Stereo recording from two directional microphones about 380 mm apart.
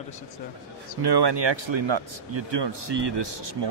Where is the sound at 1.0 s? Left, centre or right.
Right.